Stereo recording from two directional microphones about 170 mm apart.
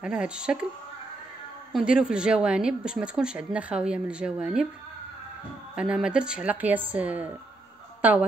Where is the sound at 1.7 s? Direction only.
5° right (ahead or behind).